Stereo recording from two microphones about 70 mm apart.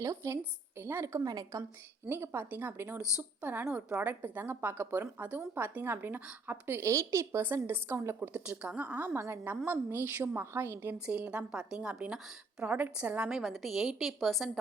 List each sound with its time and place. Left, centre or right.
0.0 s a woman's voice: right
0.8 s a woman's voice: right
1.0 s a woman's voice: right
1.3 s a woman's voice: right
2.0 s a woman's voice: right
6.8 s a woman's voice: right
7.4 s a woman's voice: right
8.2 s a woman's voice: centre; by 10.9 s right
10.9 s a woman's voice: centre
13.3 s a woman's voice: centre